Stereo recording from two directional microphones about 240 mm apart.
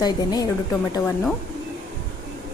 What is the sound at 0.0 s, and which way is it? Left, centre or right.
Speech, centre.